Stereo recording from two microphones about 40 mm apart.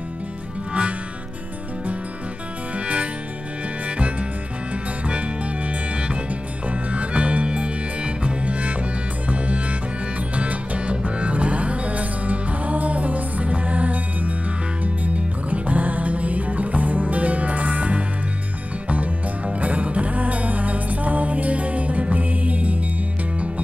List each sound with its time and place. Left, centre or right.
5.0 s music: right
15.5 s music: right